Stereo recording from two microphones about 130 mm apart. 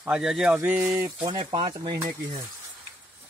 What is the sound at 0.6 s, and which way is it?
Speech, 15° right (ahead or behind).